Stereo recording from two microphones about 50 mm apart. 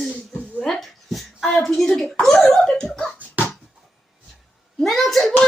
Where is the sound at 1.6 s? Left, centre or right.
Centre.